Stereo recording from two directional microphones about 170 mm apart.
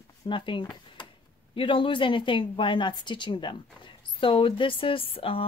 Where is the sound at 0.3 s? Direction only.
30° left (ahead or behind).